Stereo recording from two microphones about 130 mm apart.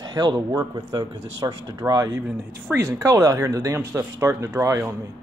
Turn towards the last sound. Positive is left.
turn(degrees=-20)  # may be behind; listen again after turning